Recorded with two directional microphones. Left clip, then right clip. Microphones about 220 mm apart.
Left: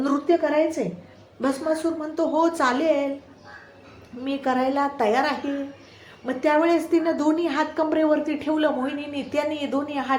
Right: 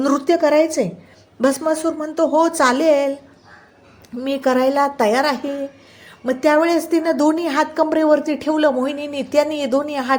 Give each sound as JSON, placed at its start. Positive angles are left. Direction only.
{"t": 0.0, "sound": "a woman's voice", "side_deg": -45}
{"t": 4.2, "sound": "a woman's voice", "side_deg": -45}